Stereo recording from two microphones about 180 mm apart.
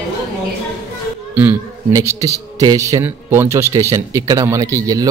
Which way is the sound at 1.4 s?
15° right (ahead or behind).